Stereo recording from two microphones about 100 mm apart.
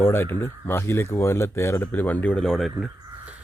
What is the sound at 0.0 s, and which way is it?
Speech, 20° left (ahead or behind).